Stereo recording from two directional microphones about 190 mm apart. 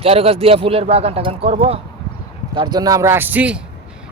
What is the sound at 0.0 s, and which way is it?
Speech, 30° right (ahead or behind).